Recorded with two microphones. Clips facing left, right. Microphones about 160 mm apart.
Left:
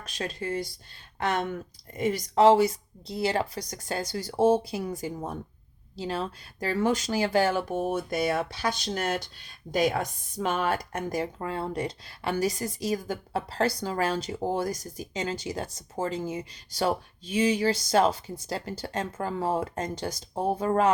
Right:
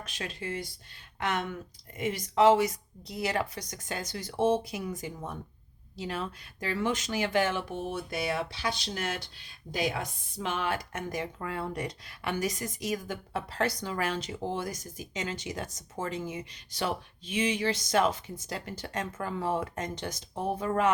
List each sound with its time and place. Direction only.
0.0 s speech: 40° left (ahead or behind)